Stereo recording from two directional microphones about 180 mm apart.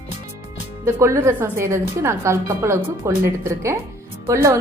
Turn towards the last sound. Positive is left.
turn(degrees=-15)  # may be behind; listen again after turning